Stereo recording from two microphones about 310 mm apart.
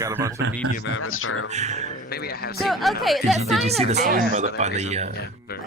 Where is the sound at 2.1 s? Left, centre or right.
Left.